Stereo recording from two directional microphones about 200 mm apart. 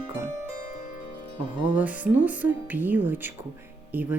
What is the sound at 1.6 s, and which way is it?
Speech, 5° right (ahead or behind).